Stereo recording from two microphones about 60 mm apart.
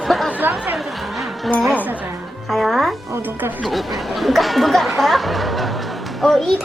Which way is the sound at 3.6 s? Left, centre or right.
Centre.